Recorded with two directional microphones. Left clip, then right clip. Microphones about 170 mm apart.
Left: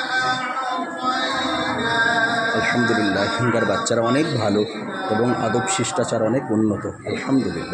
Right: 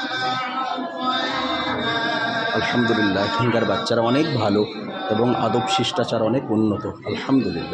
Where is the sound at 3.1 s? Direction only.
Centre (ahead or behind).